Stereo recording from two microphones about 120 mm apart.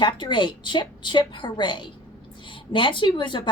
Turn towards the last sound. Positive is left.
turn(degrees=40)  # may be behind; listen again after turning